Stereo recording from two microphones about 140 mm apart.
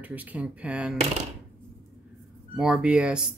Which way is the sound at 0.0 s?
10° right (ahead or behind).